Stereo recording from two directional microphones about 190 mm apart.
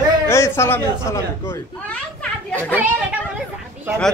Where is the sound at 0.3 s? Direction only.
15° left (ahead or behind).